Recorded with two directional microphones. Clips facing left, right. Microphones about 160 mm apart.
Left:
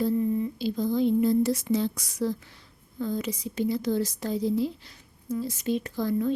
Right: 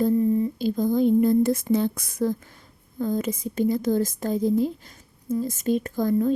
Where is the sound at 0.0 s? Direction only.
35° right (ahead or behind); by 1.6 s 50° right (ahead or behind).